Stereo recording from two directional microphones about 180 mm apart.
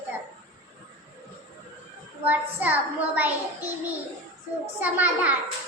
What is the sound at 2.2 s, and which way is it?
A child's voice, 10° right (ahead or behind).